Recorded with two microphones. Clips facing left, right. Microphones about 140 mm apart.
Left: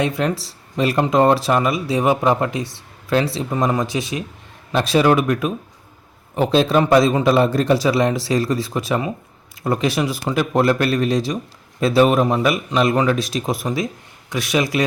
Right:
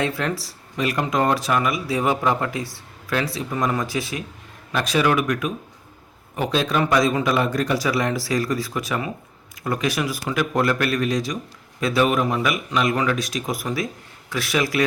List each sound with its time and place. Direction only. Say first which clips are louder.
0.0 s speech: left 4 dB; 20° left (ahead or behind)